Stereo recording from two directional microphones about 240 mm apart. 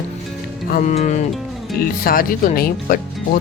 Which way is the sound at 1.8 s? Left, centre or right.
Left.